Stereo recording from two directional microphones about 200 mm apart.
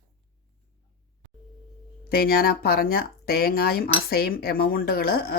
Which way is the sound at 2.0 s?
50° left (ahead or behind).